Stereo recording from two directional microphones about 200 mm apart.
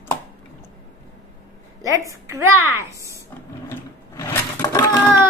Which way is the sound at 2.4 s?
90° right.